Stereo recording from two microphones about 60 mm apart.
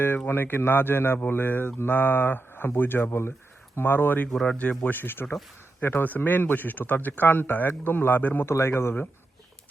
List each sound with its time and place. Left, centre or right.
0.3 s speech: left
4.3 s speech: centre
4.5 s speech: left
4.8 s speech: left
8.4 s speech: left